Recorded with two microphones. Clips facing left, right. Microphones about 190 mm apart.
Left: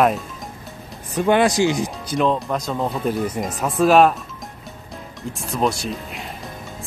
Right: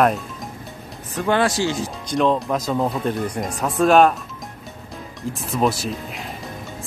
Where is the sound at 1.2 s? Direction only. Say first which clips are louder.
Left 3 dB; 15° left (ahead or behind).